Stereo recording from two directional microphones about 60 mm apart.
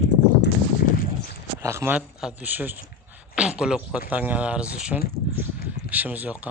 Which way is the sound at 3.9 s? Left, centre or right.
Right.